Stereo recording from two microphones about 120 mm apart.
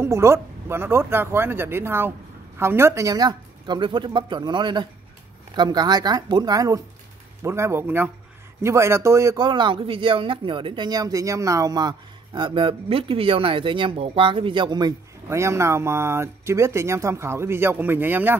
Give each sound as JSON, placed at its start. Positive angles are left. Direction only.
{"t": 0.0, "sound": "speech", "side_deg": -20}
{"t": 9.4, "sound": "speech", "side_deg": -40}
{"t": 12.4, "sound": "speech", "side_deg": -40}